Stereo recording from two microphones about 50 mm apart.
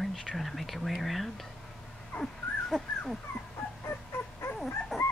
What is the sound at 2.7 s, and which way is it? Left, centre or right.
Speech, centre.